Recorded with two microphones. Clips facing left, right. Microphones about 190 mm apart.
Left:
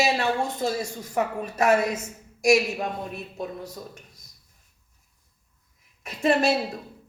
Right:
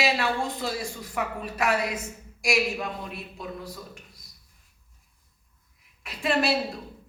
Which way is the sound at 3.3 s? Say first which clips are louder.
Left 3 dB; 45° left (ahead or behind).